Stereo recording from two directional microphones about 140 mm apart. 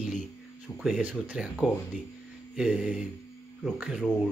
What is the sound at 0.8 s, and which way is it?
Speech, 5° right (ahead or behind).